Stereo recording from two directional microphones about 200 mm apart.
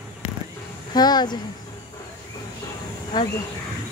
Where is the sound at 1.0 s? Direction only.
20° left (ahead or behind).